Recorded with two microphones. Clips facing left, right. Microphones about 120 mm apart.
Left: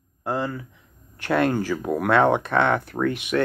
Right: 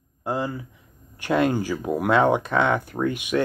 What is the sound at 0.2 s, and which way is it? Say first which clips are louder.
Speech: even; 15° right (ahead or behind).